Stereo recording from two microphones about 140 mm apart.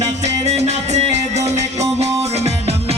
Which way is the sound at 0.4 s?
50° right (ahead or behind).